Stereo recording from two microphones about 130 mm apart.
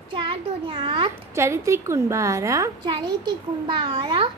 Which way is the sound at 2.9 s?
35° right (ahead or behind).